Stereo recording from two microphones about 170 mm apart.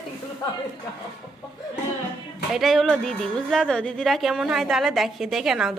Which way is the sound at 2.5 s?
Centre (ahead or behind).